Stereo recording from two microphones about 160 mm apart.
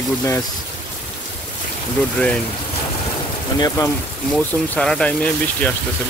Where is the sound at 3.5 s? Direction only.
20° left (ahead or behind).